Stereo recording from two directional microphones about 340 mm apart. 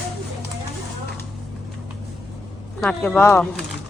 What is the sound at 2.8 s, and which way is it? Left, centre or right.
Speech, centre.